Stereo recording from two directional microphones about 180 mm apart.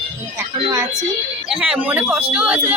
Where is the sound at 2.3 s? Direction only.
5° right (ahead or behind).